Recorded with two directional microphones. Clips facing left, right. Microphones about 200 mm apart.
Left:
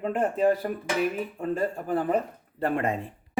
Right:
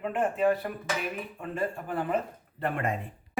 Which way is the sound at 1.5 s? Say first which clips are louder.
Left 2 dB; 40° left (ahead or behind).